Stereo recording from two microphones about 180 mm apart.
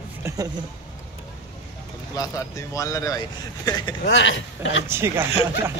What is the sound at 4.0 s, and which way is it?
Speech, 85° left.